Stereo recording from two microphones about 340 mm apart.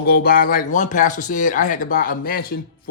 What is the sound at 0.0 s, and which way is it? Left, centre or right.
A man's voice, left.